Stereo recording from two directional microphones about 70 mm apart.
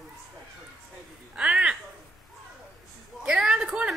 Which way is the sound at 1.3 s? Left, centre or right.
Centre.